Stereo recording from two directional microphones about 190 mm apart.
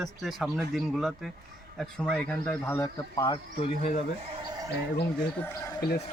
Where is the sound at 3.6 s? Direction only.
35° left (ahead or behind).